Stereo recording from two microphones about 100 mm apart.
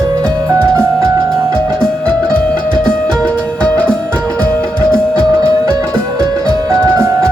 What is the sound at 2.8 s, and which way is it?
Music, 15° left (ahead or behind).